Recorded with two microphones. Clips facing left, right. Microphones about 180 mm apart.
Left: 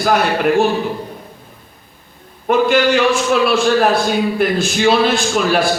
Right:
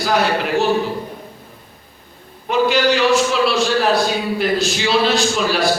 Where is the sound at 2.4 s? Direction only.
55° left (ahead or behind).